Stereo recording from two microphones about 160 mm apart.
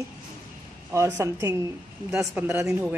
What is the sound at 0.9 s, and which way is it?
Speech, 15° right (ahead or behind).